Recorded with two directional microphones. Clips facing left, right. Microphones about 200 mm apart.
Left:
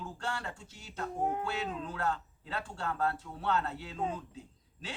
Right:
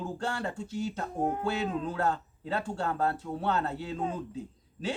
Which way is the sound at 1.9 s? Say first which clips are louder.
Right 5 dB; 40° right (ahead or behind).